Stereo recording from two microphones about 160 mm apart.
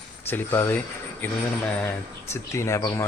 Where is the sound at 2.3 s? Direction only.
15° left (ahead or behind).